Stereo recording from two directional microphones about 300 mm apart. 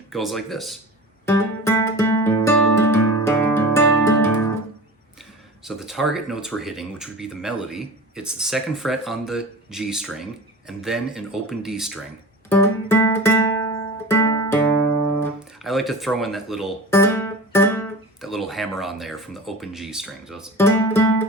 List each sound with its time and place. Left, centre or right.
0.1 s speech: centre
1.2 s music: centre
5.6 s speech: centre
12.5 s music: centre
15.6 s speech: centre
20.7 s music: centre